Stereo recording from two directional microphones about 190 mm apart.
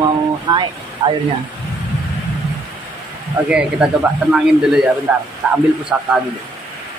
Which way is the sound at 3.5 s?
5° right (ahead or behind).